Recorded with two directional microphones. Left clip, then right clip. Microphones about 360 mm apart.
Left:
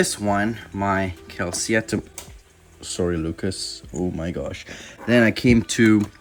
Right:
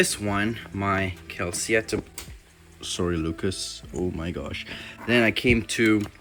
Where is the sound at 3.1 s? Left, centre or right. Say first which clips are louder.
Left 1 dB; centre.